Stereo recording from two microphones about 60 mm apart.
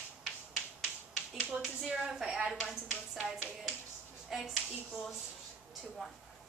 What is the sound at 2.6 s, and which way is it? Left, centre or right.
Speech, left.